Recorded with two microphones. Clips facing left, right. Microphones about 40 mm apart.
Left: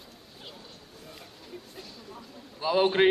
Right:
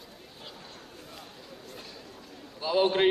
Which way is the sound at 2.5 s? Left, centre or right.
Centre.